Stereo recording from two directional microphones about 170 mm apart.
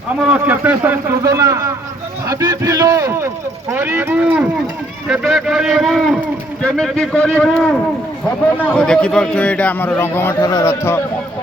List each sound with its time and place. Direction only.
0.3 s a man's voice: 10° right (ahead or behind)
2.2 s a sound: 20° right (ahead or behind); by 6.1 s centre (ahead or behind)
6.6 s a man's voice: 5° left (ahead or behind)